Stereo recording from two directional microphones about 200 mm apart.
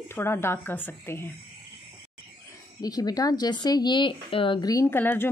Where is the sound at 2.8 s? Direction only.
20° left (ahead or behind).